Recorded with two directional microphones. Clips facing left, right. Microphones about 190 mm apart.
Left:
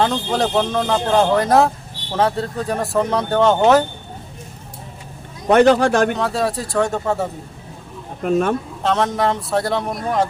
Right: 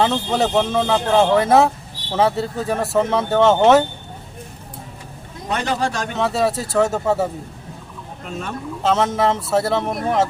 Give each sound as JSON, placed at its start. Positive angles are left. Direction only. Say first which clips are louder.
{"t": 0.0, "sound": "speech", "louder": "even", "side_deg": -5}
{"t": 5.5, "sound": "speech", "louder": "left 10 dB", "side_deg": 60}
{"t": 6.1, "sound": "speech", "louder": "right 1 dB", "side_deg": 0}
{"t": 8.2, "sound": "speech", "louder": "left 12 dB", "side_deg": 55}
{"t": 8.8, "sound": "speech", "louder": "right 2 dB", "side_deg": -5}